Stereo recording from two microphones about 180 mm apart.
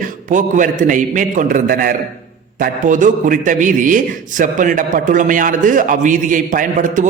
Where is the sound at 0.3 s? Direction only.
45° right (ahead or behind).